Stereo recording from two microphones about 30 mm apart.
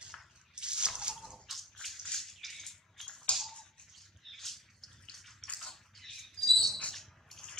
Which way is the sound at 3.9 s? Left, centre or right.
Centre.